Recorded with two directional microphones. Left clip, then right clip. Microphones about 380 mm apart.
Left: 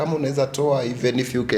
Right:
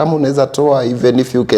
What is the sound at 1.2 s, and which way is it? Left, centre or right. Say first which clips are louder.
Speech: right 9 dB; centre.